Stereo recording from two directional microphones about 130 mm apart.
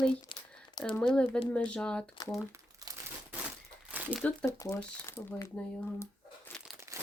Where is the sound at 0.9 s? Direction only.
10° left (ahead or behind).